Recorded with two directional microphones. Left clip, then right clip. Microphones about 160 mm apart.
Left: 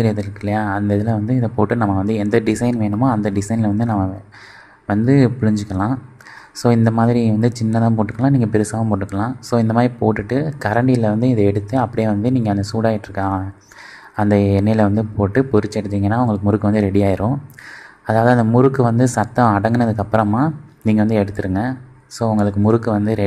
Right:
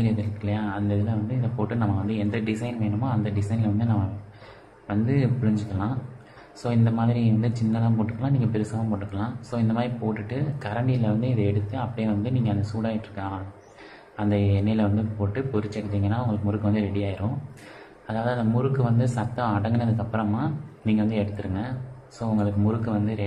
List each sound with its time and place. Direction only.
0.0 s speech: 50° left (ahead or behind)
4.8 s speech: 50° left (ahead or behind)